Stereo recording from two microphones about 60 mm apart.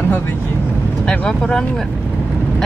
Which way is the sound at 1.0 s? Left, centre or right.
Centre.